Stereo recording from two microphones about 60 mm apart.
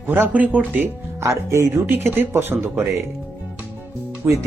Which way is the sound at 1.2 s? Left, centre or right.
Right.